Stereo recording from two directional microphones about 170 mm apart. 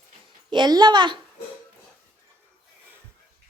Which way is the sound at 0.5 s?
25° right (ahead or behind).